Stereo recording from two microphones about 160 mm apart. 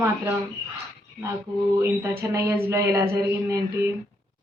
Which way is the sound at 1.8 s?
20° right (ahead or behind).